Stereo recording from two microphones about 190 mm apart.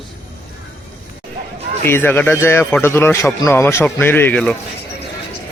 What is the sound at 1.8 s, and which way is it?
A man's voice, 10° left (ahead or behind).